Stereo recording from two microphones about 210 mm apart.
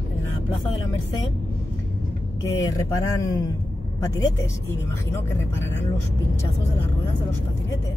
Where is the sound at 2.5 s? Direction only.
15° left (ahead or behind).